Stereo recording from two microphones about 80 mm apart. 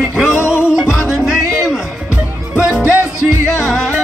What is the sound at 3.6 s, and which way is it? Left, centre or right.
Music, centre.